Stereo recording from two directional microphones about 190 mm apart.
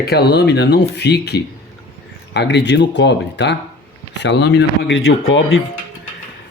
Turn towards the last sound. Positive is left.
turn(degrees=90)